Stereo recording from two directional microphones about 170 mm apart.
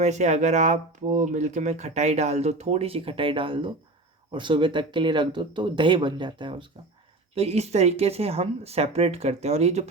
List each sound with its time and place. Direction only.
0.0 s speech: 40° right (ahead or behind)